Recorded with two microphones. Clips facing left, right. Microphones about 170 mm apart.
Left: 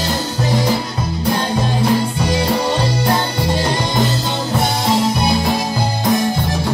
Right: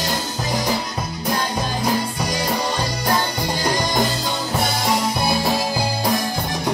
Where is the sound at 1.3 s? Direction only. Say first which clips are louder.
Left 3 dB; 30° left (ahead or behind).